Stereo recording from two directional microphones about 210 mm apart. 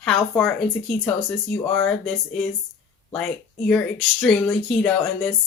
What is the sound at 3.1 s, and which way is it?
Speech, 5° left (ahead or behind).